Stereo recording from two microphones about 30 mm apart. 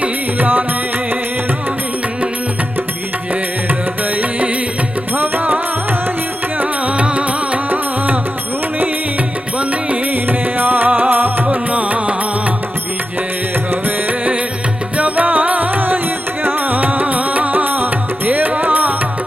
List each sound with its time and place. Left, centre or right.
0.3 s music: right
5.1 s music: right
6.6 s music: right
7.7 s music: right
10.2 s music: right
11.1 s music: right
11.7 s music: right
14.9 s music: right
18.3 s music: right